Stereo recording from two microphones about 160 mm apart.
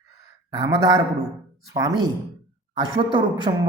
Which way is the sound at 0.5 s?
25° right (ahead or behind).